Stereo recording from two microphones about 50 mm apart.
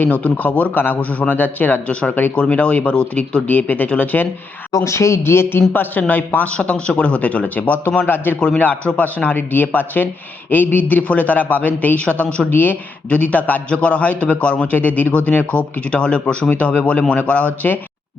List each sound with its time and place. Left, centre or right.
0.0 s speech: left
1.9 s speech: left
3.4 s speech: left
4.7 s speech: left
5.7 s speech: left
6.5 s speech: left
13.1 s speech: left